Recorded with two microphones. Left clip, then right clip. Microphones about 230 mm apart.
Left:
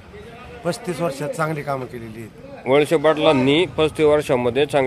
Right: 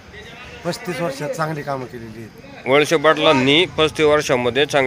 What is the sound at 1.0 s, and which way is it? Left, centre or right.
Speech, centre.